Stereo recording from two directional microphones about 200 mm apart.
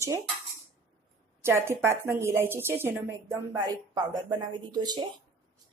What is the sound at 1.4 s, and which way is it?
Speech, 10° right (ahead or behind).